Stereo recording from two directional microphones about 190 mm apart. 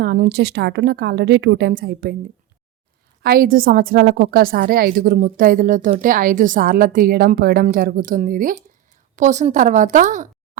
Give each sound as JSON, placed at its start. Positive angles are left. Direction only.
{"t": 0.0, "sound": "a woman's voice", "side_deg": -60}
{"t": 3.2, "sound": "a woman's voice", "side_deg": -50}